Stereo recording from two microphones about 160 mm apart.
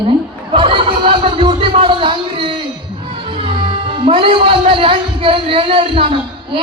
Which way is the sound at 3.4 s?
30° right (ahead or behind).